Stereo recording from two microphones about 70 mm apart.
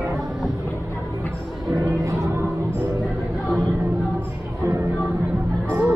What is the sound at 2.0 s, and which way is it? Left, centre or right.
Music, right.